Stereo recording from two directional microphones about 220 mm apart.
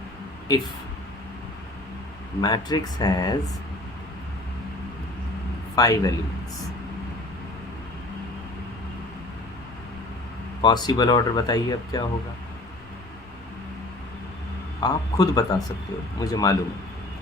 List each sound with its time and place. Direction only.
2.4 s speech: 20° left (ahead or behind)
5.7 s a man's voice: 15° left (ahead or behind)
10.6 s speech: 20° left (ahead or behind)
14.8 s speech: 15° left (ahead or behind)